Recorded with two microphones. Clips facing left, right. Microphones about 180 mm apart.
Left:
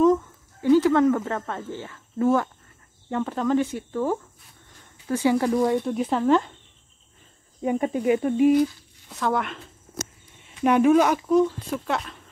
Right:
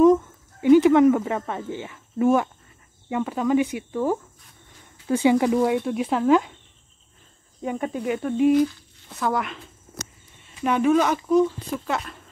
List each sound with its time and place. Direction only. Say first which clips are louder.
0.0 s a sound: right 3 dB; 15° right (ahead or behind)
3.1 s speech: right 1 dB; 5° right (ahead or behind)
7.9 s speech: left 4 dB; 5° left (ahead or behind)
10.6 s speech: left 2 dB; 10° left (ahead or behind)